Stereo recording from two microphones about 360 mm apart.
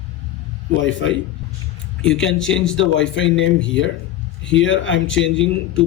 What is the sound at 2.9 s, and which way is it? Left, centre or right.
Speech, left.